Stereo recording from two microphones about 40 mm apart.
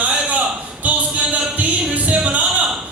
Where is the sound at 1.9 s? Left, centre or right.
Right.